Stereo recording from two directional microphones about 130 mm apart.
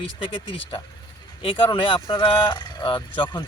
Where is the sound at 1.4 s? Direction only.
40° left (ahead or behind).